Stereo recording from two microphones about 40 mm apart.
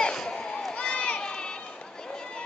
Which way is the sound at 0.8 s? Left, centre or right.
Left.